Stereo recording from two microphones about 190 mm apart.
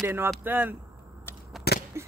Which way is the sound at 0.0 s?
10° right (ahead or behind).